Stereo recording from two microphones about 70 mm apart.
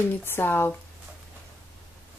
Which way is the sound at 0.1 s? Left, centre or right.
Left.